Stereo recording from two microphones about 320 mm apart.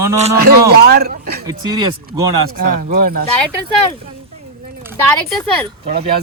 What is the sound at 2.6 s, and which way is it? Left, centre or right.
Speech, right.